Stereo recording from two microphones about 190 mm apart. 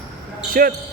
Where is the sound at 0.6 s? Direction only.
50° right (ahead or behind).